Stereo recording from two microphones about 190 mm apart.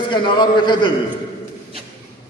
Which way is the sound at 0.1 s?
25° left (ahead or behind).